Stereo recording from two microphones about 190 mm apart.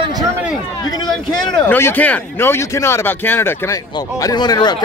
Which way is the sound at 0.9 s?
20° left (ahead or behind).